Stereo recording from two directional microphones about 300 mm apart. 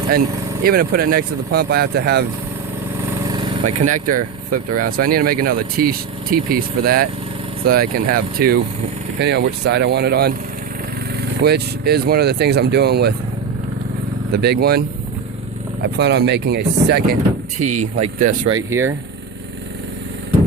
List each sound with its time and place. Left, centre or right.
0.6 s speech: right
3.8 s speech: right
14.3 s speech: right
18.5 s speech: centre